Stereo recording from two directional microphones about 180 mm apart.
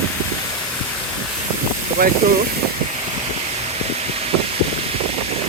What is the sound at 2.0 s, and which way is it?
Speech, 50° right (ahead or behind).